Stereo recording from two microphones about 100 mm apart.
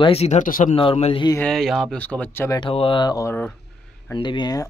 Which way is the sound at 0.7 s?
75° left (ahead or behind).